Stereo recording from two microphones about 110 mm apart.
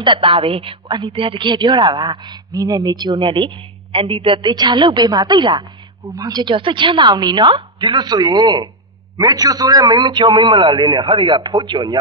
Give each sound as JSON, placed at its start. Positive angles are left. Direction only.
{"t": 0.0, "sound": "a woman's voice", "side_deg": -50}
{"t": 4.5, "sound": "a woman's voice", "side_deg": -40}